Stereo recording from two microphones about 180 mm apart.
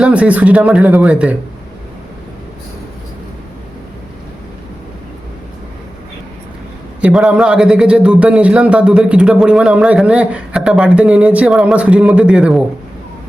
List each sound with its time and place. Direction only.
0.0 s speech: 5° right (ahead or behind)
7.0 s a man's voice: 5° right (ahead or behind)